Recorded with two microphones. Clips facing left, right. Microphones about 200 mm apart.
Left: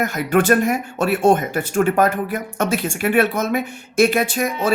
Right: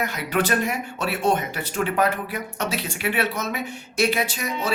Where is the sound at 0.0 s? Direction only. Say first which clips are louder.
Left 6 dB; 50° left (ahead or behind).